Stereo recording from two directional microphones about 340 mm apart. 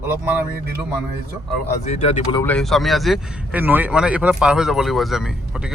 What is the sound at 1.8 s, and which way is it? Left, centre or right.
Speech, centre.